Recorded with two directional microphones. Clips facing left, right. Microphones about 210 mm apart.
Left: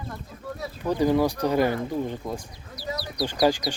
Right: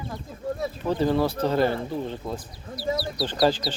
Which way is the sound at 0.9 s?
15° left (ahead or behind).